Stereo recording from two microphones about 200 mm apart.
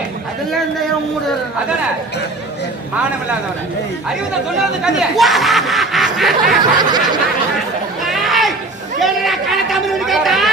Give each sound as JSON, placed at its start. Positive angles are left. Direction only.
{"t": 4.8, "sound": "speech", "side_deg": 0}
{"t": 6.7, "sound": "snicker", "side_deg": -20}
{"t": 8.0, "sound": "chatter", "side_deg": 0}